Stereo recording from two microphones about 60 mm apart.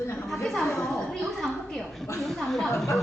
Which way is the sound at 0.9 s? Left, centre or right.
Centre.